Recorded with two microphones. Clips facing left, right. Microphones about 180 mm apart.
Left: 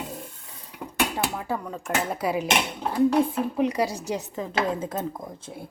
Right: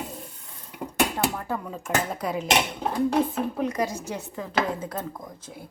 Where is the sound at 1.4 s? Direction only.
5° left (ahead or behind).